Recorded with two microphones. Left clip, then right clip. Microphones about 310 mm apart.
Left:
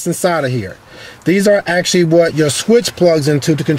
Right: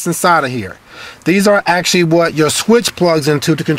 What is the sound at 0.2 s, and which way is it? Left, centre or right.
Speech, right.